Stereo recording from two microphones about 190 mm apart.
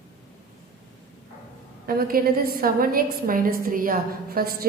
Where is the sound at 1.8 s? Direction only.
50° right (ahead or behind).